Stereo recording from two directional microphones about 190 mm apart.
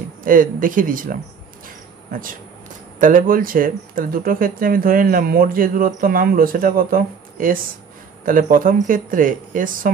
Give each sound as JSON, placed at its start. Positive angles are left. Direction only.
{"t": 0.2, "sound": "speech", "side_deg": -45}